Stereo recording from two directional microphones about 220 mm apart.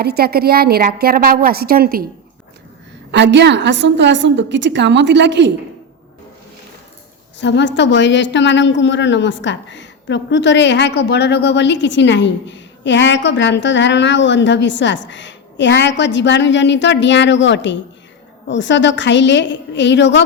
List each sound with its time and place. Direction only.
0.0 s a woman's voice: 45° right (ahead or behind)
3.1 s a woman's voice: 50° right (ahead or behind)
7.3 s a woman's voice: 55° left (ahead or behind)